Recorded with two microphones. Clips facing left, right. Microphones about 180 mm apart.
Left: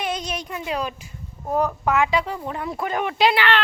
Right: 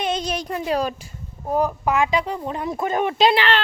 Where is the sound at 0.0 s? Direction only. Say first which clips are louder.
Right 3 dB; 30° right (ahead or behind).